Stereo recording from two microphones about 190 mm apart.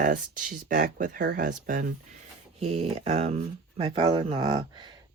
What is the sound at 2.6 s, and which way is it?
Speech, 35° right (ahead or behind).